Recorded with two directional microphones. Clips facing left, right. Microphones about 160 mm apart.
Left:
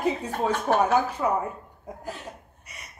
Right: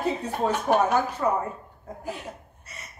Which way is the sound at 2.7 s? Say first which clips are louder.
Right 2 dB; 15° left (ahead or behind).